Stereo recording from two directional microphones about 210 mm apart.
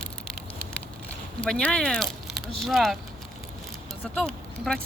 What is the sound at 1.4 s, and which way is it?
Speech, 5° left (ahead or behind).